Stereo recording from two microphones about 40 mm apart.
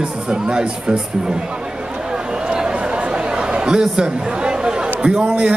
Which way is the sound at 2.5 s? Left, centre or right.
Right.